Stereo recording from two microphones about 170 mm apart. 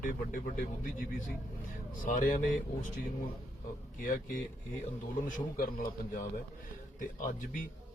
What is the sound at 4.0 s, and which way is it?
A man's voice, 50° left (ahead or behind).